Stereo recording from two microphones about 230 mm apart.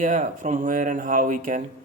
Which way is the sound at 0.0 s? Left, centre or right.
Right.